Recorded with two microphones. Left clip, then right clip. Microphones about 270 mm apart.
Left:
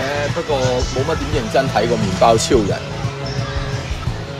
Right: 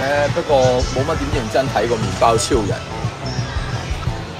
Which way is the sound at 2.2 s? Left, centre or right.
Left.